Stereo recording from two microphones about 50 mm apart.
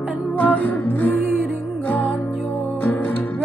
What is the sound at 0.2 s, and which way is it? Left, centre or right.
Music, left.